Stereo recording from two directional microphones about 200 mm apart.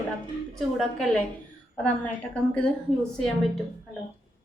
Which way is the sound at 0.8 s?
Centre (ahead or behind).